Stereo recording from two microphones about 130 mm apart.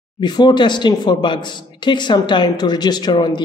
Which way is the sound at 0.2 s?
35° left (ahead or behind).